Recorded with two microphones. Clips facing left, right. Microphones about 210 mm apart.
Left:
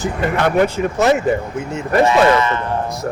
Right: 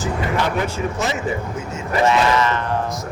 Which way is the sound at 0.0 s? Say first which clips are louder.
Left 3 dB; 60° left (ahead or behind).